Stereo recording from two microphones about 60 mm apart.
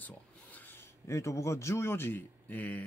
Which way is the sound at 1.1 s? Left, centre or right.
Left.